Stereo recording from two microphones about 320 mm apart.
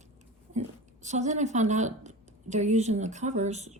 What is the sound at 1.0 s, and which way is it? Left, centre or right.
Speech, right.